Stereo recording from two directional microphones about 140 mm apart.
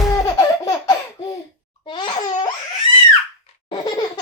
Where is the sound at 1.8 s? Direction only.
35° left (ahead or behind).